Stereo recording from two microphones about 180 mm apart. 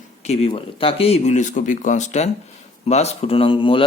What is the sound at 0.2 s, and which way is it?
Speech, 35° left (ahead or behind).